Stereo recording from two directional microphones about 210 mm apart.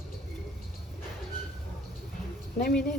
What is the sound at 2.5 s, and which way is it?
Speech, 45° left (ahead or behind).